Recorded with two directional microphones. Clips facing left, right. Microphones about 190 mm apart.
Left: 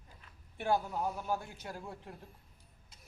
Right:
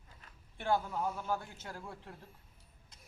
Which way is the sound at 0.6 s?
15° left (ahead or behind).